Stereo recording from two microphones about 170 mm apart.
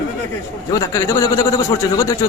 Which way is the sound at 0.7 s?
20° left (ahead or behind).